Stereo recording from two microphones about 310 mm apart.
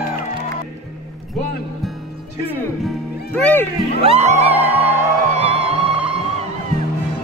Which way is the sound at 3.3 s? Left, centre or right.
Centre.